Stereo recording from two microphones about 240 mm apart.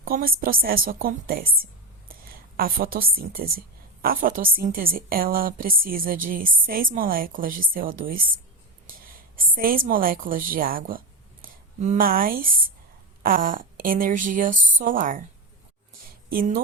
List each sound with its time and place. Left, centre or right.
0.0 s a woman's voice: right
16.3 s a woman's voice: right